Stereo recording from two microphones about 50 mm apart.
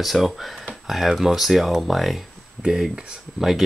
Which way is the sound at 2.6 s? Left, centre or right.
Centre.